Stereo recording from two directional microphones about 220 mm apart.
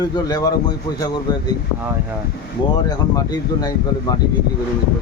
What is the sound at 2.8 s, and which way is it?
Speech, 15° left (ahead or behind).